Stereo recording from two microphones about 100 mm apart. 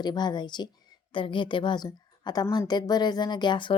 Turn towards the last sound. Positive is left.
turn(degrees=50)  # may be behind; listen again after turning